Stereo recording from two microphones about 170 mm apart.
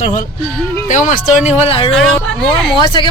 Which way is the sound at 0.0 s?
45° left (ahead or behind).